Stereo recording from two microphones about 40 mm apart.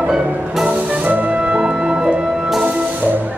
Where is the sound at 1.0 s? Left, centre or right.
Right.